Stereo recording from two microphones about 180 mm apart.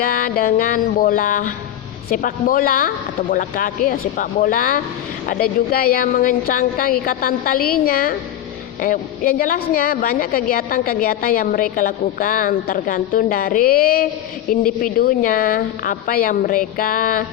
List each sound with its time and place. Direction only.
0.0 s a woman's voice: 50° left (ahead or behind)